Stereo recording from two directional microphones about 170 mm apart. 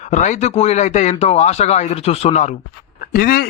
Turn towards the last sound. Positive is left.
turn(degrees=60)  # may be behind; listen again after turning